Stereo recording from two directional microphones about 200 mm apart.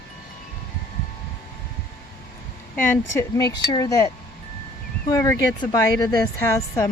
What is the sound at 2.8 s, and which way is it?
Speech, 10° left (ahead or behind).